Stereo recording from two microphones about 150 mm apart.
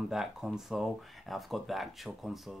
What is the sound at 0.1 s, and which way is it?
Speech, 5° right (ahead or behind).